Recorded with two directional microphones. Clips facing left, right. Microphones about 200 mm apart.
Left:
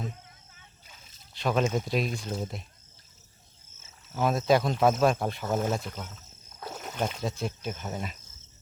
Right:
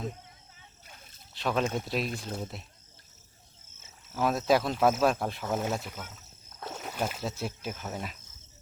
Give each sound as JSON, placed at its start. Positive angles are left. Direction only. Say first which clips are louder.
{"t": 0.9, "sound": "a sound", "louder": "right 3 dB", "side_deg": -55}
{"t": 1.3, "sound": "speech", "louder": "left 3 dB", "side_deg": 0}
{"t": 4.1, "sound": "speech", "louder": "left 1 dB", "side_deg": 0}